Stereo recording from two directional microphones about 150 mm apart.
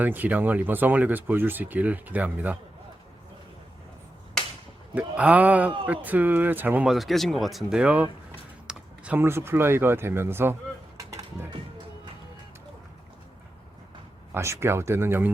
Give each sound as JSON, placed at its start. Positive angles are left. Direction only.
{"t": 0.0, "sound": "speech", "side_deg": -10}
{"t": 4.9, "sound": "speech", "side_deg": -10}
{"t": 8.6, "sound": "a sound", "side_deg": -10}
{"t": 14.3, "sound": "speech", "side_deg": -20}